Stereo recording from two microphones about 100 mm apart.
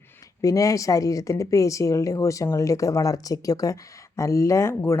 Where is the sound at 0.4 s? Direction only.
35° left (ahead or behind).